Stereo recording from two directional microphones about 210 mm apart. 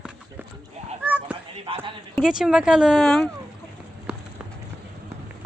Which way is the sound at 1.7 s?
25° right (ahead or behind).